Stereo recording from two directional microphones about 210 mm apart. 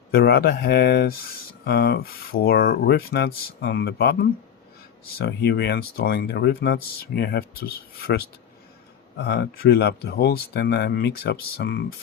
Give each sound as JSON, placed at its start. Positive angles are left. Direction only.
{"t": 0.1, "sound": "speech", "side_deg": 50}